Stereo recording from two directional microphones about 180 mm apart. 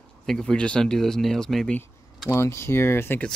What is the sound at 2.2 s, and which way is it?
Speech, 15° left (ahead or behind).